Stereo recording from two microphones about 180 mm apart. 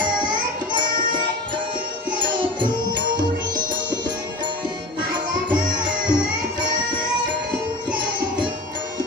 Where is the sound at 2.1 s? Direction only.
25° right (ahead or behind).